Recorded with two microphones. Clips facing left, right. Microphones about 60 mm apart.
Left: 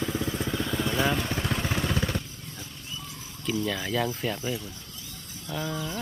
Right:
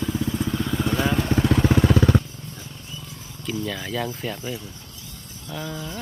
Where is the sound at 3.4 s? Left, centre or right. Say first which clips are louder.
Even; centre.